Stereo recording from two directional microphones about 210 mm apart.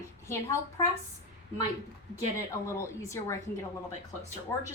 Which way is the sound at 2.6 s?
15° left (ahead or behind).